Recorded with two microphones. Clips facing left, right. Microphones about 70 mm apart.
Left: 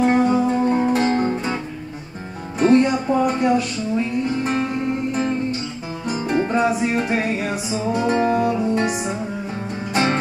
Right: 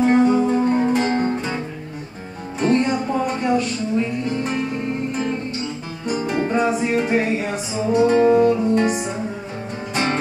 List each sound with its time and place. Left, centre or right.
0.0 s music: centre
2.6 s music: centre
6.0 s music: centre